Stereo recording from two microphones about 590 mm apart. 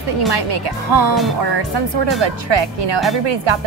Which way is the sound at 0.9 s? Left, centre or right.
Right.